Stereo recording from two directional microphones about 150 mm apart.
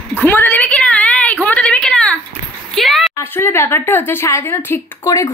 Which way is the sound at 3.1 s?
15° left (ahead or behind).